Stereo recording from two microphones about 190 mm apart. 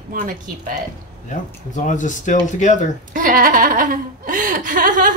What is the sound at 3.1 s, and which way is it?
Speech, 45° right (ahead or behind).